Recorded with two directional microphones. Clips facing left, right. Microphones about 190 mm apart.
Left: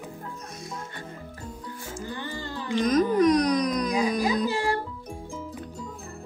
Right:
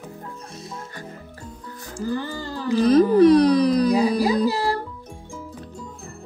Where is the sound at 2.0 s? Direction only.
35° right (ahead or behind).